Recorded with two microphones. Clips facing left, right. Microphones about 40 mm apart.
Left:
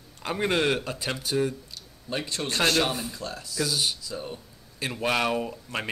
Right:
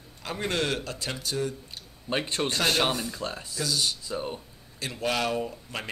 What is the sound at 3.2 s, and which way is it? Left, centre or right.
Speech, right.